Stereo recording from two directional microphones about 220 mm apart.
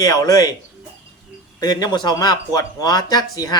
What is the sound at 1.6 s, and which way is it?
Speech, 20° left (ahead or behind).